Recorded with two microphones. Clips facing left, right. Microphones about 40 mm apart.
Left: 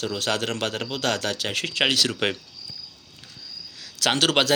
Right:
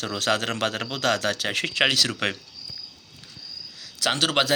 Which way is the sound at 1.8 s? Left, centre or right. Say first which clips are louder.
Even; centre.